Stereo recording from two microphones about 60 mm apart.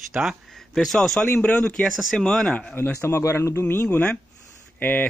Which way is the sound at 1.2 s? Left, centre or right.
Left.